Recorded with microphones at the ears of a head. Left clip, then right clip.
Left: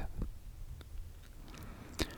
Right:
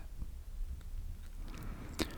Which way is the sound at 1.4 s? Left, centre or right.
Centre.